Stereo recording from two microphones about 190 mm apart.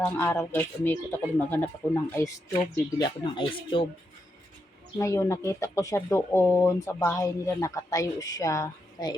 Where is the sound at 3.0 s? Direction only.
25° left (ahead or behind).